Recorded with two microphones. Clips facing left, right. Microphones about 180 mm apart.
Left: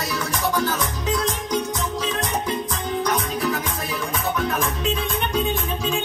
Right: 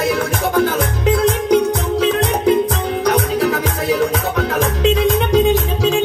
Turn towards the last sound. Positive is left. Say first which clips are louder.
# right 9 dB
turn(degrees=-90)